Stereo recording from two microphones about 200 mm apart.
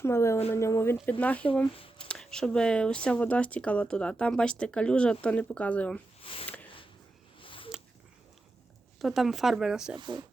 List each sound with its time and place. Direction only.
0.0 s speech: 15° left (ahead or behind)
1.7 s speech: 25° left (ahead or behind)
2.0 s speech: 5° left (ahead or behind)
6.2 s speech: 30° left (ahead or behind)
7.4 s a sound: 25° left (ahead or behind)
9.0 s speech: centre (ahead or behind)
10.0 s speech: 20° right (ahead or behind)